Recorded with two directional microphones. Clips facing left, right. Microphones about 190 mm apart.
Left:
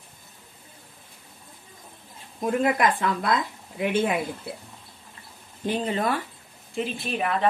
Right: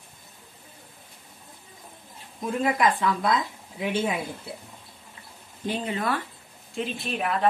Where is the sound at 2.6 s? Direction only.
55° left (ahead or behind).